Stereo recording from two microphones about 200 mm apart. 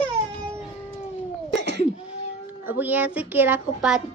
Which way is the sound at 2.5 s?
10° right (ahead or behind).